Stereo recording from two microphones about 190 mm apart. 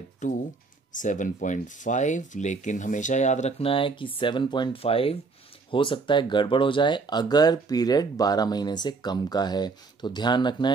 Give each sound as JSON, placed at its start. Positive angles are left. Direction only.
{"t": 0.2, "sound": "speech", "side_deg": 40}